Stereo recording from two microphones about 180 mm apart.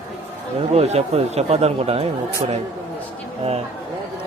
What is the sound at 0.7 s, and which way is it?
Speech, 35° right (ahead or behind).